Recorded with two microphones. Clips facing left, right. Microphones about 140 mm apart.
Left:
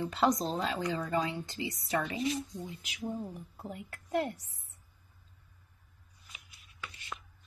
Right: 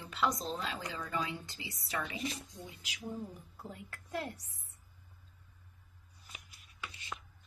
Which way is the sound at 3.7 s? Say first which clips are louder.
Left 8 dB; 25° left (ahead or behind).